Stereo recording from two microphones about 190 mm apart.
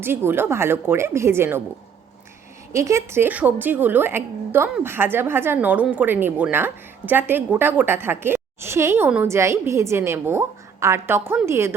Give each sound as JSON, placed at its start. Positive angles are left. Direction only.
{"t": 0.0, "sound": "a woman's voice", "side_deg": -10}
{"t": 2.7, "sound": "a woman's voice", "side_deg": -15}